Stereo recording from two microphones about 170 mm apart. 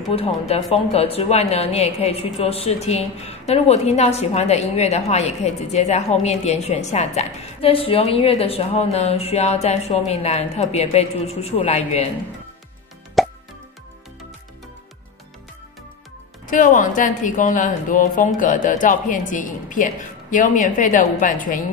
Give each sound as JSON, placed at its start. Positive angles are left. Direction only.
{"t": 0.1, "sound": "speech", "side_deg": 35}
{"t": 13.2, "sound": "plop", "side_deg": 0}
{"t": 16.4, "sound": "speech", "side_deg": 50}